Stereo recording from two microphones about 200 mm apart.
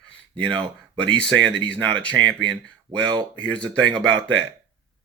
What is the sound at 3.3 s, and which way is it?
Speech, 5° left (ahead or behind).